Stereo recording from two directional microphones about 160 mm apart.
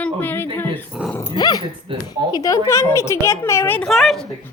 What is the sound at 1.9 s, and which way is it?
Speech, 35° right (ahead or behind).